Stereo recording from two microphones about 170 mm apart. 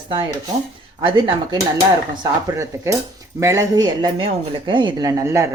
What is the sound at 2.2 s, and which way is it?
Speech, 20° right (ahead or behind).